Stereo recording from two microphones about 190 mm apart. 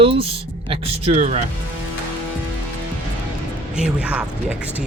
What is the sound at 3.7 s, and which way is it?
Speech, 5° right (ahead or behind).